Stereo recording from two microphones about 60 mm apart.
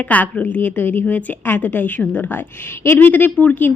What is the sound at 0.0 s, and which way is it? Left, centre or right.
A woman's voice, left.